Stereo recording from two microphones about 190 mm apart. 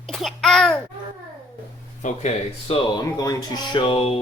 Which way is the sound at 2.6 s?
20° left (ahead or behind).